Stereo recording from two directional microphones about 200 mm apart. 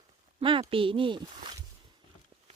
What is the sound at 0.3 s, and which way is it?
Speech, 25° right (ahead or behind).